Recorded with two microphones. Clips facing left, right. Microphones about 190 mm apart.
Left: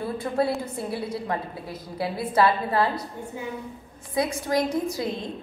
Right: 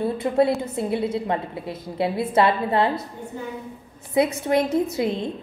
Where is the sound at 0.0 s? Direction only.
20° right (ahead or behind).